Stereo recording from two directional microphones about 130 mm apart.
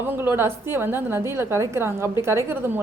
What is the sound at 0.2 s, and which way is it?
A woman's voice, 20° right (ahead or behind).